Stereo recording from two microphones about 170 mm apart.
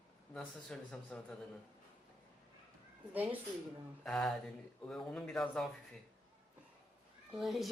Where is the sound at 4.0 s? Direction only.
5° left (ahead or behind).